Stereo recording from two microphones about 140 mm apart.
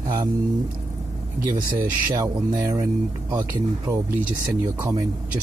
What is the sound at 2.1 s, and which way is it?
Speech, 30° right (ahead or behind).